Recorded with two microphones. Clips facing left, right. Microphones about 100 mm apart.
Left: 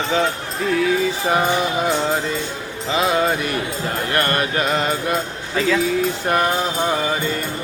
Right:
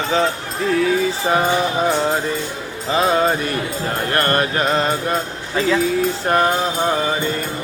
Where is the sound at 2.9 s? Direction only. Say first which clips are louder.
Right 2 dB; 40° right (ahead or behind).